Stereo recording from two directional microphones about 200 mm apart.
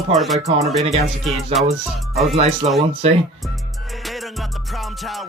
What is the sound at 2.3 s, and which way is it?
Speech, 30° right (ahead or behind).